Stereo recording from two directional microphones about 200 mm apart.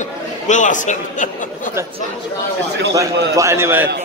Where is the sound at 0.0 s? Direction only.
40° left (ahead or behind).